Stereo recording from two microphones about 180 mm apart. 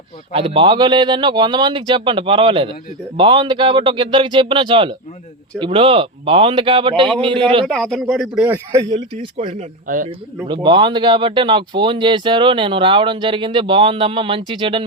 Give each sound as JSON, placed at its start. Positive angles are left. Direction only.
{"t": 0.3, "sound": "speech", "side_deg": -30}
{"t": 7.7, "sound": "a man's voice", "side_deg": 5}
{"t": 9.8, "sound": "speech", "side_deg": -50}
{"t": 10.4, "sound": "speech", "side_deg": -25}